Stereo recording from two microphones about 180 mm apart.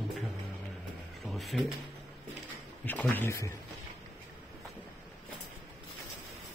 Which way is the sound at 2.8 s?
10° left (ahead or behind).